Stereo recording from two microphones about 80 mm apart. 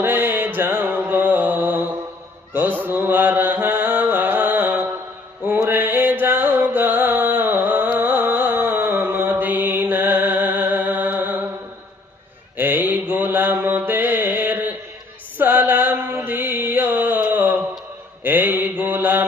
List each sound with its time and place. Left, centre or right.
0.0 s music: right
2.5 s mantra: right
5.6 s music: right
12.5 s mantra: right